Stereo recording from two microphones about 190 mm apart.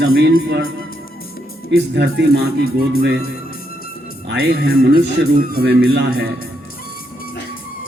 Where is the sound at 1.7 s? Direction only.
65° right (ahead or behind).